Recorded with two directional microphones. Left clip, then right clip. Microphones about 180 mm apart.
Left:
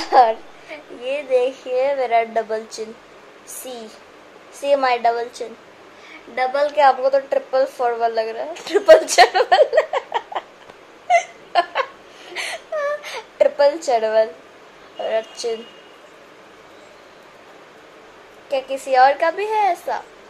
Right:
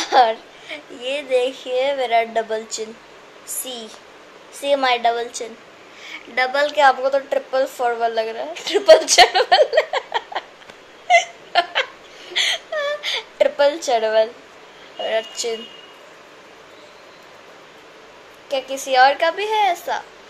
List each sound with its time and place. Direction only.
0.0 s a woman's voice: 5° left (ahead or behind)
4.6 s a woman's voice: 5° left (ahead or behind)
11.1 s laughter: 5° left (ahead or behind)
12.4 s whimper: 5° left (ahead or behind)
13.8 s a woman's voice: 5° left (ahead or behind)
18.9 s a woman's voice: 10° left (ahead or behind)